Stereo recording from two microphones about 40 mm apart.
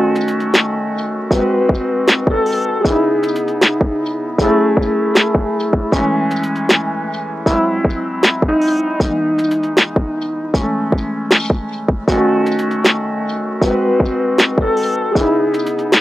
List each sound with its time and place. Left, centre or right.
0.0 s music: centre